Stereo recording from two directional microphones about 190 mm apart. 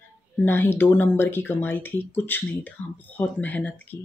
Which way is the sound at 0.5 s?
10° left (ahead or behind).